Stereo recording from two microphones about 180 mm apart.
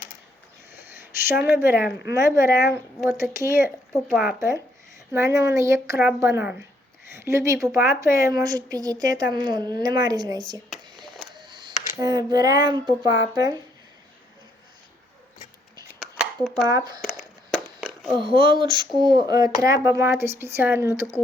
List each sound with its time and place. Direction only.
1.3 s speech: 10° right (ahead or behind)
4.1 s speech: centre (ahead or behind)
4.4 s speech: 15° right (ahead or behind)
10.7 s a sound: centre (ahead or behind)
11.4 s camera: 25° right (ahead or behind)
11.9 s speech: 20° right (ahead or behind)
16.0 s a sound: 5° right (ahead or behind)
16.6 s speech: 20° right (ahead or behind)
17.0 s a sound: centre (ahead or behind)
18.2 s speech: 30° right (ahead or behind)